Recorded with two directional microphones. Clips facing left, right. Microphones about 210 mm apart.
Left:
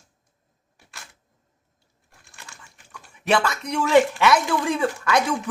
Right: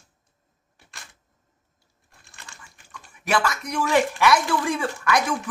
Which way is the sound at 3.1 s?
25° left (ahead or behind).